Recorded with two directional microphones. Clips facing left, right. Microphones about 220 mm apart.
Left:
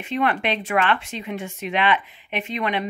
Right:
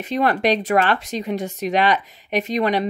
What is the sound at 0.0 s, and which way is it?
Speech, 40° right (ahead or behind).